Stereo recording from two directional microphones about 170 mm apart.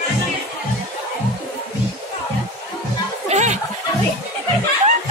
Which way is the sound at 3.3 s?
40° right (ahead or behind).